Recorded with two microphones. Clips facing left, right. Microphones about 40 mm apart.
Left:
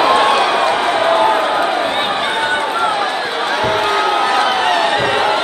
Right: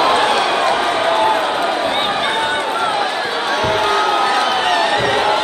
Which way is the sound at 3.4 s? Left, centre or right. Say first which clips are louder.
Left 1 dB; centre.